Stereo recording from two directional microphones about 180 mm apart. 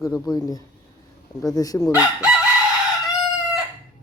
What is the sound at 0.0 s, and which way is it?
Speech, 20° left (ahead or behind).